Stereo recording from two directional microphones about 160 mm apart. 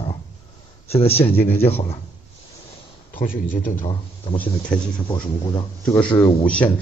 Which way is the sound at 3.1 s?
60° left (ahead or behind).